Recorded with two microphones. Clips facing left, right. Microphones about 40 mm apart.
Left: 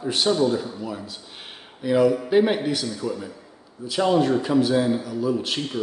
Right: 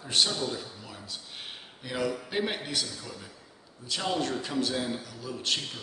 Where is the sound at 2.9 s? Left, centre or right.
Centre.